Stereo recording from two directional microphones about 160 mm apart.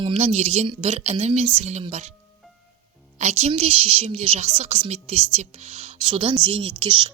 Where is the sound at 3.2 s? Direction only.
45° right (ahead or behind).